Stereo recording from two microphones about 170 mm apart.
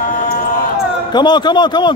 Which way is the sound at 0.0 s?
50° left (ahead or behind).